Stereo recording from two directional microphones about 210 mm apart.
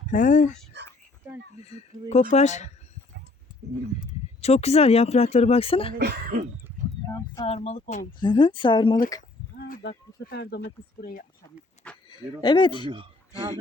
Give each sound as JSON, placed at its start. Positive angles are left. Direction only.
{"t": 0.1, "sound": "speech", "side_deg": 35}
{"t": 1.6, "sound": "speech", "side_deg": 30}
{"t": 4.4, "sound": "speech", "side_deg": 30}
{"t": 6.0, "sound": "speech", "side_deg": -50}
{"t": 7.1, "sound": "a sound", "side_deg": 15}
{"t": 7.4, "sound": "speech", "side_deg": 30}
{"t": 8.2, "sound": "speech", "side_deg": 20}
{"t": 9.6, "sound": "livestock", "side_deg": 45}
{"t": 10.2, "sound": "speech", "side_deg": 50}
{"t": 12.0, "sound": "speech", "side_deg": 20}